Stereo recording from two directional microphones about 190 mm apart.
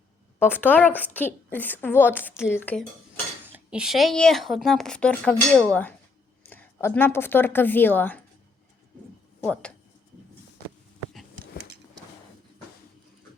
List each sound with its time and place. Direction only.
0.3 s a woman's voice: 10° left (ahead or behind)
3.5 s a woman's voice: 5° right (ahead or behind)
9.4 s speech: 5° left (ahead or behind)